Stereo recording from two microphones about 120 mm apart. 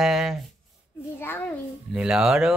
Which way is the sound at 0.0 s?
Centre (ahead or behind).